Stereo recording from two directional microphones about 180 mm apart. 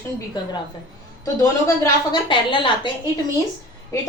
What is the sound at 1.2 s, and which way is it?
A woman's voice, 15° left (ahead or behind).